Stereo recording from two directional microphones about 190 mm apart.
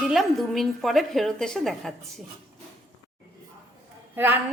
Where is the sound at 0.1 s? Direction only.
Centre (ahead or behind).